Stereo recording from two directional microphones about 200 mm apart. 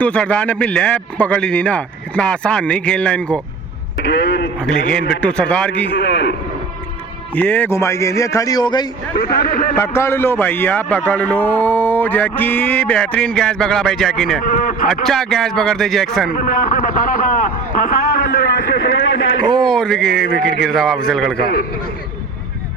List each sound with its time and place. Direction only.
0.0 s a man's voice: 5° left (ahead or behind)
4.0 s speech: 60° left (ahead or behind)
4.9 s a man's voice: 5° left (ahead or behind)
6.0 s speech: 60° left (ahead or behind)
7.3 s a man's voice: 10° left (ahead or behind)
9.1 s a man's voice: 50° left (ahead or behind)
9.7 s a man's voice: 10° left (ahead or behind)
14.4 s a man's voice: 40° left (ahead or behind)
15.0 s a man's voice: centre (ahead or behind)
16.3 s a man's voice: 45° left (ahead or behind)
18.4 s a man's voice: 65° left (ahead or behind)
19.6 s a man's voice: 5° left (ahead or behind)
21.3 s a man's voice: 50° left (ahead or behind)